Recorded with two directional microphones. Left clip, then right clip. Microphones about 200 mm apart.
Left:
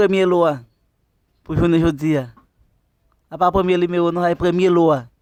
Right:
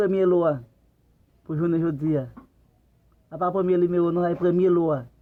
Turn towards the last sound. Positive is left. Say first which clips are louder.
# left 7 dB
turn(degrees=45)  # may be behind; listen again after turning